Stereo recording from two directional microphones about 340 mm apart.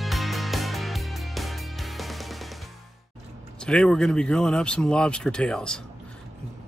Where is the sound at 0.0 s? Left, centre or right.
Centre.